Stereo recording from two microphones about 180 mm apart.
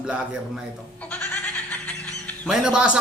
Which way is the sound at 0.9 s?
10° left (ahead or behind).